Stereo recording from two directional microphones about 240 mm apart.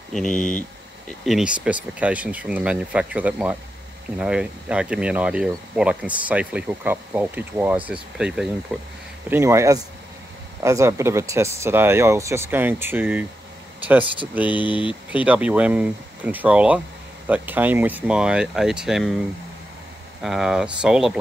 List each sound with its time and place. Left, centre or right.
0.1 s speech: centre
14.5 s speech: centre
15.0 s speech: centre